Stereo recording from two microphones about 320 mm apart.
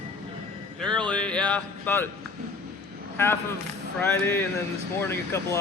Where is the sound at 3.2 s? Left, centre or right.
Centre.